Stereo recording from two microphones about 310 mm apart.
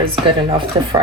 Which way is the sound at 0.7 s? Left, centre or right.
Centre.